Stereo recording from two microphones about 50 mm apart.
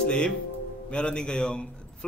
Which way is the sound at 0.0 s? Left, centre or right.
Left.